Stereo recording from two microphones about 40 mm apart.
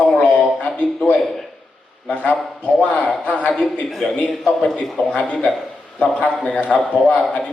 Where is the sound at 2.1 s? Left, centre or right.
Left.